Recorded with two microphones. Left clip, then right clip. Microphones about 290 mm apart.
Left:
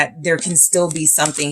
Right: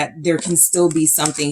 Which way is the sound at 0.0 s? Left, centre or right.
Left.